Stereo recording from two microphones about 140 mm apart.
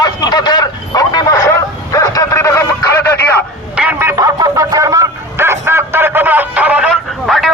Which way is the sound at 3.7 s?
10° right (ahead or behind).